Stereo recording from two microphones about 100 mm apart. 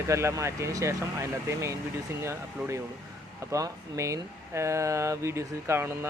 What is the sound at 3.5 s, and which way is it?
Speech, 30° right (ahead or behind).